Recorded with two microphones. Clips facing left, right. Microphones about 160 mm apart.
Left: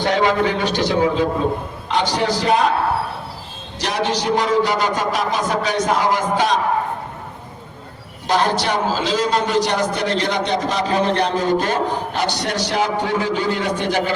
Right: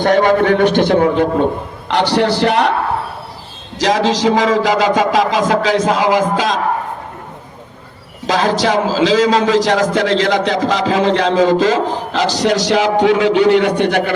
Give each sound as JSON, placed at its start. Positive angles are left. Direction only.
{"t": 0.0, "sound": "a man's voice", "side_deg": -50}
{"t": 3.8, "sound": "a man's voice", "side_deg": -90}
{"t": 8.3, "sound": "a man's voice", "side_deg": -90}